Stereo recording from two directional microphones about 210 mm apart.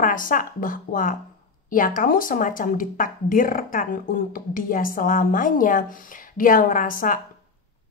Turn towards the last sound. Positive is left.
turn(degrees=40)  # may be behind; listen again after turning